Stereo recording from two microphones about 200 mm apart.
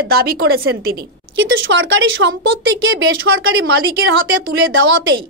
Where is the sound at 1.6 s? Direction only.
70° right (ahead or behind).